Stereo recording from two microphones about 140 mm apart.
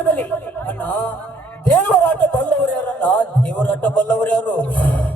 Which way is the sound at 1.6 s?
10° left (ahead or behind).